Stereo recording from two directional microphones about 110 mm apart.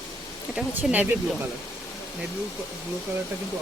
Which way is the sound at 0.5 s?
10° right (ahead or behind).